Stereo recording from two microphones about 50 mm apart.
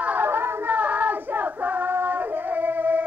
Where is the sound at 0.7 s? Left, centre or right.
Right.